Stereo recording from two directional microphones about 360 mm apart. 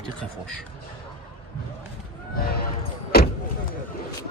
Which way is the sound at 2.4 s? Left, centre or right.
Left.